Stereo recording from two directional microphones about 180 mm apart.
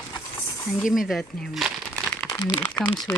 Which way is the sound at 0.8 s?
Centre (ahead or behind).